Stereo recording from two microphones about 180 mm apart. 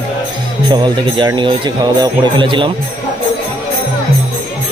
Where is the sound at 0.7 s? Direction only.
25° right (ahead or behind).